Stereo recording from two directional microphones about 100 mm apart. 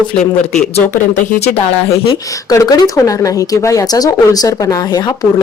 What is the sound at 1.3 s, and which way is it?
Speech, 90° left.